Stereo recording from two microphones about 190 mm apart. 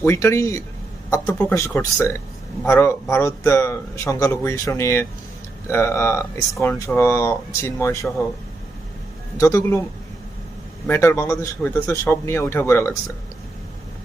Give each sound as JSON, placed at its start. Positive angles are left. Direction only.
{"t": 0.0, "sound": "speech", "side_deg": 15}
{"t": 9.4, "sound": "speech", "side_deg": 15}
{"t": 10.8, "sound": "speech", "side_deg": 10}